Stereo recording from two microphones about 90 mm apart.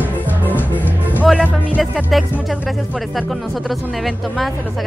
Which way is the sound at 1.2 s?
10° right (ahead or behind).